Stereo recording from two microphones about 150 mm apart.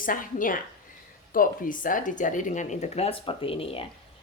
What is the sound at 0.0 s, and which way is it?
Speech, 65° left (ahead or behind).